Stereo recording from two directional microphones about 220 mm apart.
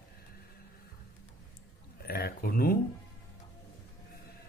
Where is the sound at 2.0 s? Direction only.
45° left (ahead or behind).